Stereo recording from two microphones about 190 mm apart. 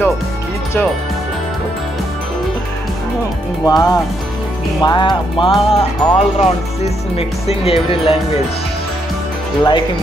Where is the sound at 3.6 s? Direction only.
20° left (ahead or behind).